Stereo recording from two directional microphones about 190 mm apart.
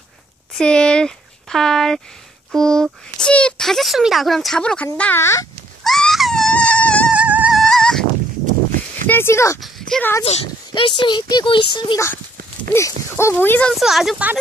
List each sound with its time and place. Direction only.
0.5 s speech: 5° left (ahead or behind)
5.9 s wail: centre (ahead or behind)
7.1 s dog: 5° right (ahead or behind)
9.0 s speech: 10° left (ahead or behind)
9.6 s a sound: centre (ahead or behind)
10.2 s speech: 30° left (ahead or behind); by 14.4 s 5° right (ahead or behind)